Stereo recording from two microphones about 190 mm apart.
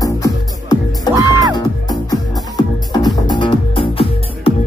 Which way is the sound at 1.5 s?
20° left (ahead or behind).